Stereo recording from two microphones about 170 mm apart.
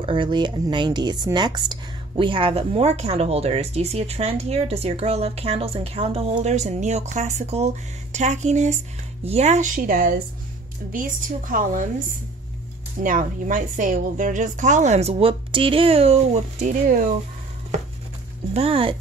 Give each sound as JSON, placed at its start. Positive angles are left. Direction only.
{"t": 0.0, "sound": "a woman's voice", "side_deg": -30}
{"t": 13.0, "sound": "a woman's voice", "side_deg": -50}
{"t": 18.5, "sound": "speech", "side_deg": -35}